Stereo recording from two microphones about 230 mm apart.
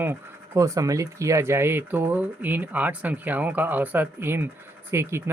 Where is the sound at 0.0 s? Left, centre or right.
Centre.